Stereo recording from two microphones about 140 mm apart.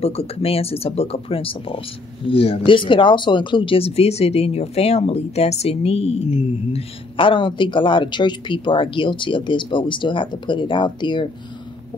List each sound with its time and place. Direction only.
0.0 s speech: 45° left (ahead or behind)